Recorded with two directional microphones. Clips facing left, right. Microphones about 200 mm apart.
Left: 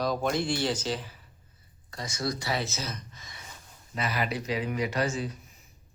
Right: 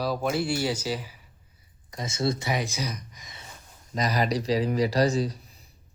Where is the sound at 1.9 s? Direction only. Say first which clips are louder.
Right 5 dB; 20° right (ahead or behind).